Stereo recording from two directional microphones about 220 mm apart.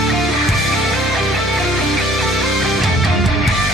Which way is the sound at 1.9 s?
Centre (ahead or behind).